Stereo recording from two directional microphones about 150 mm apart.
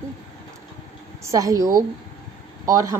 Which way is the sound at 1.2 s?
20° right (ahead or behind).